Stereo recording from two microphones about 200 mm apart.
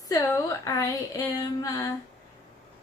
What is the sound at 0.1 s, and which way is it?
A woman's voice, 15° left (ahead or behind).